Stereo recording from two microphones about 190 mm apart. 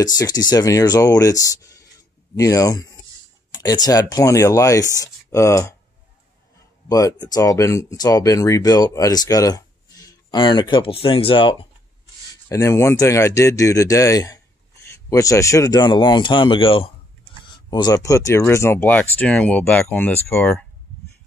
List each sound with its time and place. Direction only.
0.0 s speech: 20° left (ahead or behind)
6.9 s speech: 20° left (ahead or behind)
12.4 s speech: 15° left (ahead or behind)